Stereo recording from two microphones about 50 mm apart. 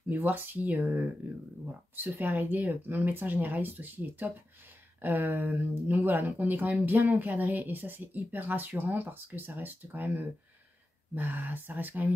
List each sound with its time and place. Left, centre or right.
0.1 s speech: right